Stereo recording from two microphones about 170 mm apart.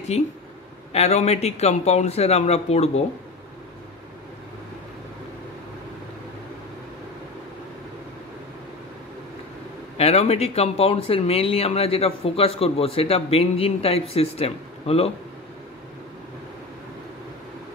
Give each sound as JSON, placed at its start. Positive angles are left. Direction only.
{"t": 0.9, "sound": "speech", "side_deg": 40}
{"t": 9.9, "sound": "speech", "side_deg": 40}